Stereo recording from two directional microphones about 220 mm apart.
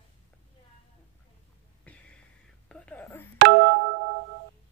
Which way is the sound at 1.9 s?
5° left (ahead or behind).